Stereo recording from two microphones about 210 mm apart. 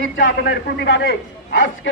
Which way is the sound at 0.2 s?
55° left (ahead or behind).